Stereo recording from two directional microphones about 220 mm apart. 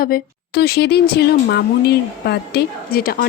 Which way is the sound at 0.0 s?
45° left (ahead or behind).